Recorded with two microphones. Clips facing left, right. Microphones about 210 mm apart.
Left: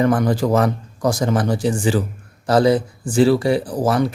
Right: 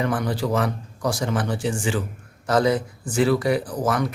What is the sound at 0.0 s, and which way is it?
Speech, 45° left (ahead or behind).